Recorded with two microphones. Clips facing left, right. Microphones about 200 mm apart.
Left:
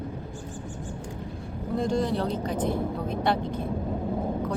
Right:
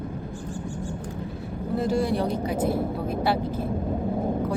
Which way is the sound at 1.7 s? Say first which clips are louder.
Right 2 dB; 5° right (ahead or behind).